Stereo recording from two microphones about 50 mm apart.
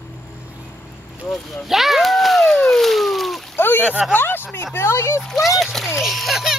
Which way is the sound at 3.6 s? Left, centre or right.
Left.